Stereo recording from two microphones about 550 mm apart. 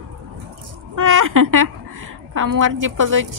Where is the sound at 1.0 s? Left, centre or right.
Right.